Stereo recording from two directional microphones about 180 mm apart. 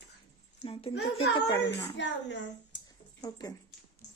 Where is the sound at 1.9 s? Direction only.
80° left.